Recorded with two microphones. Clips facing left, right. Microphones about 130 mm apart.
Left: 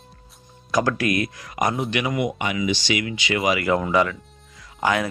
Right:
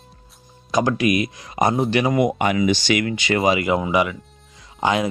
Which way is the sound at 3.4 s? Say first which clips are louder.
Right 1 dB; 25° right (ahead or behind).